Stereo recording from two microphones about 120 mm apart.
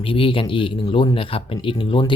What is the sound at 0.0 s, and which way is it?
Speech, 50° left (ahead or behind).